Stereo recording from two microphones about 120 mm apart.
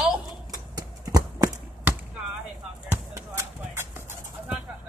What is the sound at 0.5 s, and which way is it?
Horse, 30° right (ahead or behind).